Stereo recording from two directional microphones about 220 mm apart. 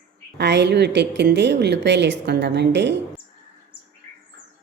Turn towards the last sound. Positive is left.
turn(degrees=-50)  # may be behind; listen again after turning